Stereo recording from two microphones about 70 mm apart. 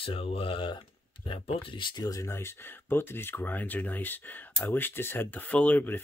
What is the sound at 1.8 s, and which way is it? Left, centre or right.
Speech, left.